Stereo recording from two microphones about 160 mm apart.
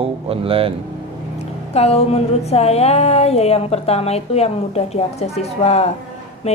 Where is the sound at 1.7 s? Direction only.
40° left (ahead or behind).